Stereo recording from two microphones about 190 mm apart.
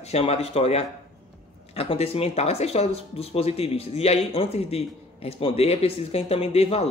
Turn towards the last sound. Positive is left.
turn(degrees=30)  # may be behind; listen again after turning